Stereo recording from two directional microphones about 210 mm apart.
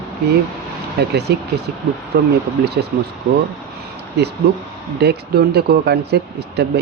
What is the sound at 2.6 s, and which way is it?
Speech, 50° right (ahead or behind).